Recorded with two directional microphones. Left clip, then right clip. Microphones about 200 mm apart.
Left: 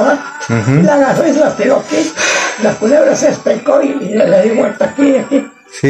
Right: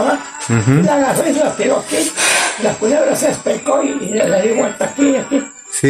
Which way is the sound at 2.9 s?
Centre (ahead or behind).